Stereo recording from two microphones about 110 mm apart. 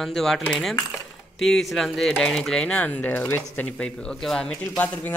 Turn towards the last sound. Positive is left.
turn(degrees=15)  # may be behind; listen again after turning